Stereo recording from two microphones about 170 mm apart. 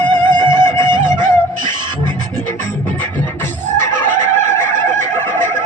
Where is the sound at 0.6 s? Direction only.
15° left (ahead or behind).